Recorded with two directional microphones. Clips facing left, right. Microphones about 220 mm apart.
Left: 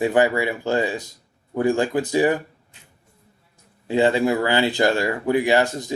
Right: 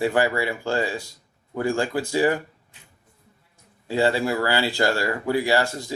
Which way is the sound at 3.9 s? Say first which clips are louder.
Left 3 dB; 20° left (ahead or behind).